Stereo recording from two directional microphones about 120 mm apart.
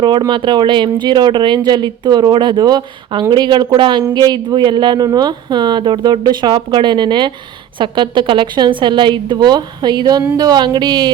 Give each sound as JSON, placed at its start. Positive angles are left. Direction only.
{"t": 0.0, "sound": "speech", "side_deg": -40}